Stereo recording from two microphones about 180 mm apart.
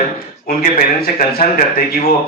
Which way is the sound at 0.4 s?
55° left (ahead or behind).